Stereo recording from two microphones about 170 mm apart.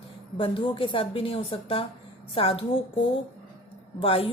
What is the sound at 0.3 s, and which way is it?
Speech, 30° left (ahead or behind).